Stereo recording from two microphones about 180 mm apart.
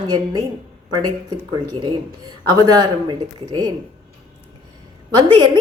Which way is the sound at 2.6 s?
20° right (ahead or behind).